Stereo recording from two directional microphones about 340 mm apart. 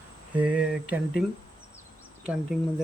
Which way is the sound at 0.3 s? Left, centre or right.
Centre.